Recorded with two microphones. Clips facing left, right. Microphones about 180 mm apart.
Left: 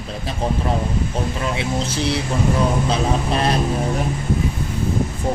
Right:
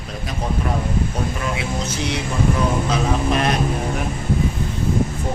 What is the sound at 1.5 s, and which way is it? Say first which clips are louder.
Speech: left 2 dB; 30° left (ahead or behind).